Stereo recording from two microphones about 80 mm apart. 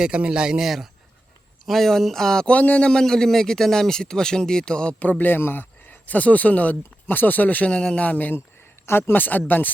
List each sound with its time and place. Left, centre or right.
0.0 s a man's voice: centre; by 9.7 s left